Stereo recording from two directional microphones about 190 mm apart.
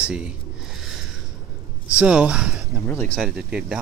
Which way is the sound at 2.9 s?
10° left (ahead or behind).